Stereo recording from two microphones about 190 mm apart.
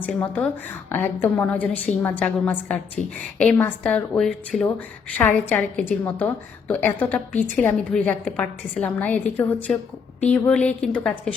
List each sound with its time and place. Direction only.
0.0 s a woman's voice: 10° left (ahead or behind)